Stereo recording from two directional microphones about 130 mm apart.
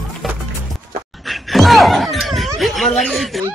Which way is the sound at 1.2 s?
Centre (ahead or behind).